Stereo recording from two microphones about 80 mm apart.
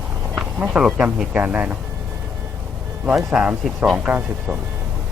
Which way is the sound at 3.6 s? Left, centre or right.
Centre.